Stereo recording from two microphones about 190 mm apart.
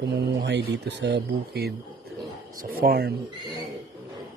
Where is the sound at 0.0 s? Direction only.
65° right (ahead or behind).